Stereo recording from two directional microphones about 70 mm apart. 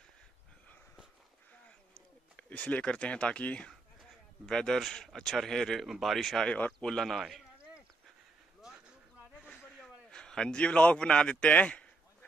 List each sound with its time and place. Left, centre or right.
2.3 s speech: centre
4.5 s speech: centre
9.4 s a sound: centre
10.1 s a man's voice: centre